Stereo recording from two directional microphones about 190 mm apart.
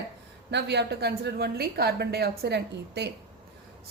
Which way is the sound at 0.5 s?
65° right (ahead or behind).